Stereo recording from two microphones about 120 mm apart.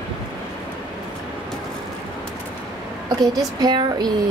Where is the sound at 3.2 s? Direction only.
35° right (ahead or behind).